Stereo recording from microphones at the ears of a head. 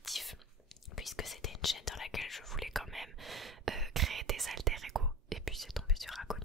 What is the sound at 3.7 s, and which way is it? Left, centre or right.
Whispering, right.